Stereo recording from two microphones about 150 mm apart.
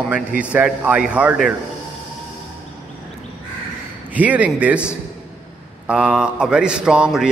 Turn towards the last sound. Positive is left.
turn(degrees=-5)  # may be behind; listen again after turning